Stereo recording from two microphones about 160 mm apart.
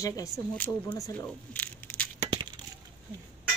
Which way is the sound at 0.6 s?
10° left (ahead or behind).